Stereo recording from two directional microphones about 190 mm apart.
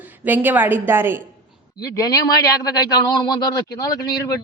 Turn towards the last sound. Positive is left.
turn(degrees=20)  # may be behind; listen again after turning